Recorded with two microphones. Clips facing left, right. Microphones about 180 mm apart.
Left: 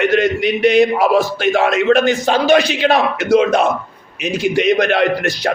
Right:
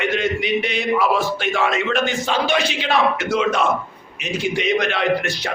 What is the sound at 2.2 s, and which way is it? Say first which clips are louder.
A man's voice: left 7 dB; 40° left (ahead or behind).